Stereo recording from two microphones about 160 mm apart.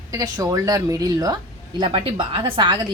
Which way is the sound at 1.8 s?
35° right (ahead or behind).